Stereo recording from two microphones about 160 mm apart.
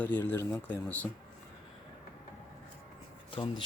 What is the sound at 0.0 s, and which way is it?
Speech, 10° left (ahead or behind).